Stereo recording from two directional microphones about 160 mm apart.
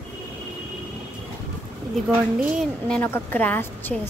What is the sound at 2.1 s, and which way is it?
Speech, 5° right (ahead or behind).